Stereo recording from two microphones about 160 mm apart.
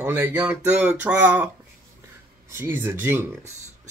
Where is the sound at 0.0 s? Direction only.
15° right (ahead or behind).